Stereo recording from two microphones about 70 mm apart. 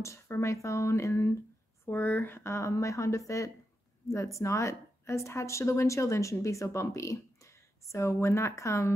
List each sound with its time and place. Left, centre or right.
0.0 s a woman's voice: left
1.9 s a woman's voice: left